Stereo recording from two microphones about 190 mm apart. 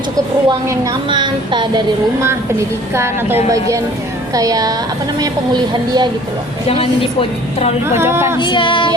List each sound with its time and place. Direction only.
0.4 s a woman's voice: 25° right (ahead or behind)
2.9 s a woman's voice: 15° right (ahead or behind)
4.4 s a woman's voice: 20° right (ahead or behind)
6.7 s a woman's voice: 30° left (ahead or behind)
7.9 s a woman's voice: 15° right (ahead or behind)
8.4 s female singing: 25° left (ahead or behind)